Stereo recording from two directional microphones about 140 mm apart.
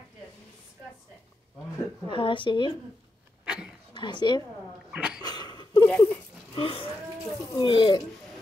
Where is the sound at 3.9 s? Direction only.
35° left (ahead or behind).